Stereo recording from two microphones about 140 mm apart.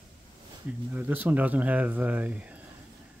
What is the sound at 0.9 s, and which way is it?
Speech, 15° right (ahead or behind).